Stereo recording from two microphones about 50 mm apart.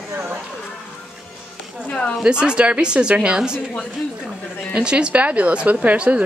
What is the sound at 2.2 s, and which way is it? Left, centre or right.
Speech, centre.